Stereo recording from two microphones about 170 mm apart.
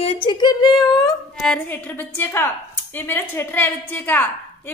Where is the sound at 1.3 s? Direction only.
5° left (ahead or behind).